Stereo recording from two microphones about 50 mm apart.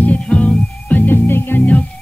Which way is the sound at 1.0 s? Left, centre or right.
Left.